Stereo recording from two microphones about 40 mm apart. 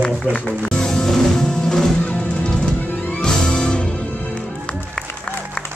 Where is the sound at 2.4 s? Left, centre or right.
Centre.